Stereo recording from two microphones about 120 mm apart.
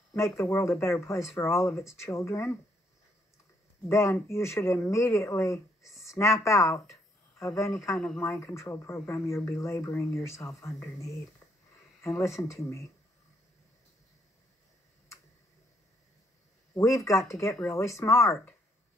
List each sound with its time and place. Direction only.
0.1 s speech: 20° left (ahead or behind)
3.9 s speech: 25° left (ahead or behind)
12.0 s speech: 25° left (ahead or behind)
16.7 s speech: 25° left (ahead or behind)